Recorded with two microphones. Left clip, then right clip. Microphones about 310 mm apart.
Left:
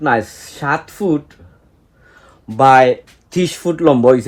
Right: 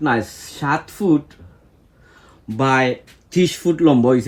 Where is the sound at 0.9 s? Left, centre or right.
Centre.